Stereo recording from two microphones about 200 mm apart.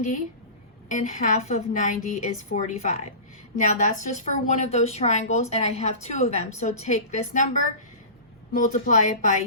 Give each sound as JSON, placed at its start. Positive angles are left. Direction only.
{"t": 0.9, "sound": "a woman's voice", "side_deg": 40}
{"t": 8.5, "sound": "a woman's voice", "side_deg": 40}